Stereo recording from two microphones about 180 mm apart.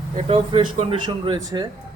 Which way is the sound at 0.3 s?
30° right (ahead or behind).